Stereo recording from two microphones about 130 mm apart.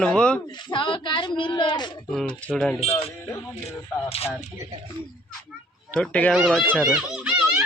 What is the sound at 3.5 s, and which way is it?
Speech, 50° left (ahead or behind).